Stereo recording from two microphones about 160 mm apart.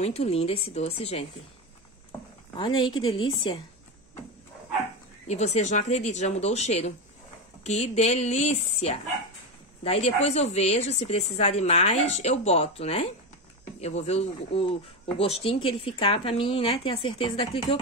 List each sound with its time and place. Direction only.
0.0 s speech: 40° left (ahead or behind)
2.5 s speech: 30° left (ahead or behind)
5.3 s speech: 45° left (ahead or behind)